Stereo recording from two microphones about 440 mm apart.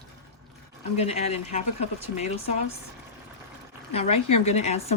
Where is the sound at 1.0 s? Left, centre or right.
Centre.